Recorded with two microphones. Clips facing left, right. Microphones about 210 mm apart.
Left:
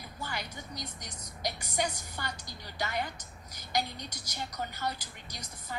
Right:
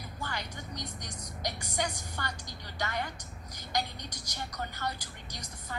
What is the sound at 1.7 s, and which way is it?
A woman's voice, 15° left (ahead or behind).